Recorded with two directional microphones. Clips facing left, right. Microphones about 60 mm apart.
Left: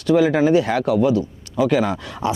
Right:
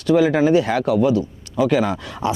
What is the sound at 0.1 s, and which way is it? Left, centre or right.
Speech, right.